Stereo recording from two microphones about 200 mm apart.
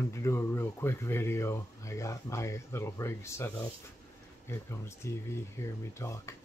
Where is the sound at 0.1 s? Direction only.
15° left (ahead or behind).